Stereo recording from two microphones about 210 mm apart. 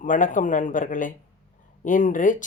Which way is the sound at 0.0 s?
40° left (ahead or behind).